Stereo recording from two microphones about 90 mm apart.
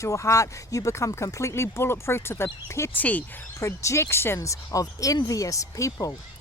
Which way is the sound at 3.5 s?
35° left (ahead or behind).